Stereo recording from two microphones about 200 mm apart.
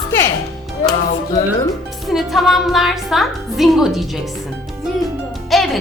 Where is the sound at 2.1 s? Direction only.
Centre (ahead or behind).